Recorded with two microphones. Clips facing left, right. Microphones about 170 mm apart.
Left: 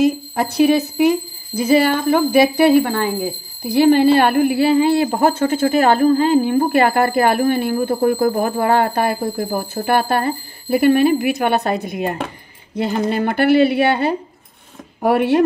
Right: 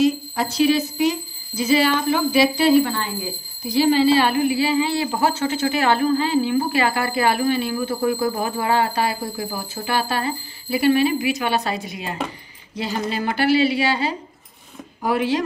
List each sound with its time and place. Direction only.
0.0 s speech: 55° left (ahead or behind)